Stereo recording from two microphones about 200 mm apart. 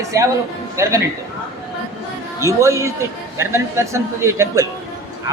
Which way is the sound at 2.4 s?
15° right (ahead or behind).